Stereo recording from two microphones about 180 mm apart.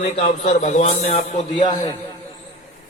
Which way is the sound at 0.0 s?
35° left (ahead or behind).